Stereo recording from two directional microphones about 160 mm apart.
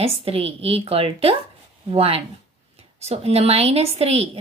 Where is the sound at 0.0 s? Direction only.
40° right (ahead or behind).